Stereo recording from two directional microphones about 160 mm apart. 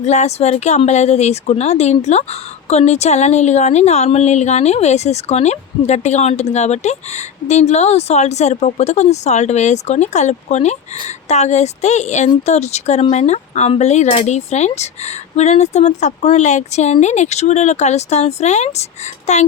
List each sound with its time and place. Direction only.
0.0 s speech: 45° left (ahead or behind)